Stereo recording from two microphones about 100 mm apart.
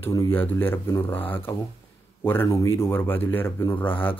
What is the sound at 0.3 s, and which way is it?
A man's voice, 20° left (ahead or behind).